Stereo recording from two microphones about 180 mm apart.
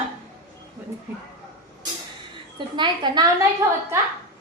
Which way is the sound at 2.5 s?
25° right (ahead or behind).